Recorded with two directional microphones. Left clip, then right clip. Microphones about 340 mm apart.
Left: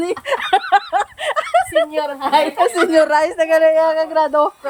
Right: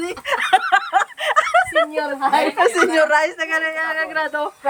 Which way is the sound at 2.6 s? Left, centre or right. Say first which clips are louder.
Left 2 dB; centre.